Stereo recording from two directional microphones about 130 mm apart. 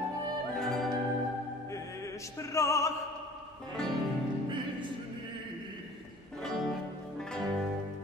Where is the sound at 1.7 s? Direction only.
25° left (ahead or behind).